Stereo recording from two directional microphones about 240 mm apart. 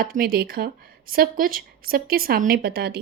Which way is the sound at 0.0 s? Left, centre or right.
Right.